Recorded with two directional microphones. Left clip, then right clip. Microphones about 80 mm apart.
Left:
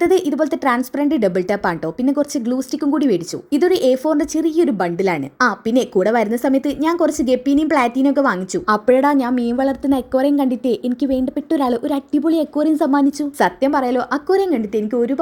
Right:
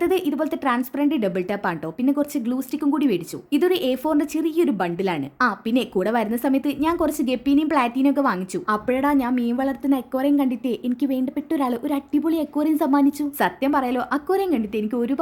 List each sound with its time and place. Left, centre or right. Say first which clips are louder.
0.0 s a woman's voice: left 6 dB; left
2.1 s speech: left 5 dB; left
8.6 s a woman's voice: left 8 dB; left
14.9 s speech: left 6 dB; centre